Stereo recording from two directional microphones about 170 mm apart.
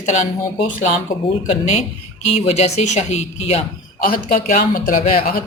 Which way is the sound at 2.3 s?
40° left (ahead or behind).